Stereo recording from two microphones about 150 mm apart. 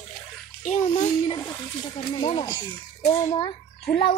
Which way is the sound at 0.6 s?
50° left (ahead or behind).